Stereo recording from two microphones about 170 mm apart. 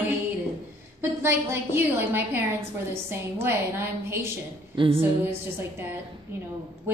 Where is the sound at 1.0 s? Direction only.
15° right (ahead or behind).